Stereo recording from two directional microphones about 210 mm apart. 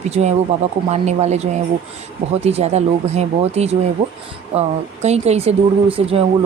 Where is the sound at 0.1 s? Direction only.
30° right (ahead or behind).